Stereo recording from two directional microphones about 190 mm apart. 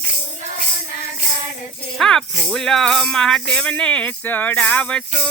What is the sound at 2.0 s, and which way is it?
Speech, 5° left (ahead or behind).